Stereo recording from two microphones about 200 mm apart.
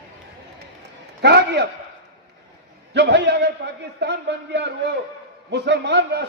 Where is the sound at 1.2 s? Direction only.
55° right (ahead or behind).